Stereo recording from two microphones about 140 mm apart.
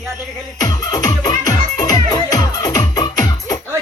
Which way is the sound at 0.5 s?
30° left (ahead or behind).